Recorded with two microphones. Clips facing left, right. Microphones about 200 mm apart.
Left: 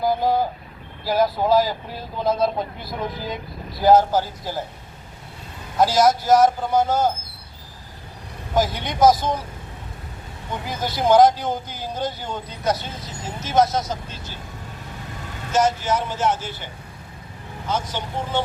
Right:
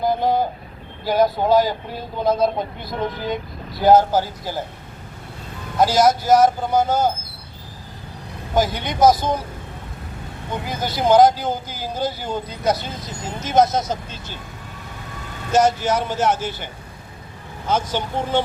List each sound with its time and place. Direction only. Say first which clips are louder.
0.0 s vehicle: right 1 dB; 5° left (ahead or behind)
1.0 s speech: right 2 dB; centre (ahead or behind)
5.8 s speech: right 1 dB; centre (ahead or behind)
8.5 s speech: right 1 dB; centre (ahead or behind)
10.7 s speech: right 1 dB; centre (ahead or behind); by 14.3 s 20° right (ahead or behind)
15.6 s speech: right 2 dB; 70° right (ahead or behind)
17.7 s speech: right 4 dB; 90° right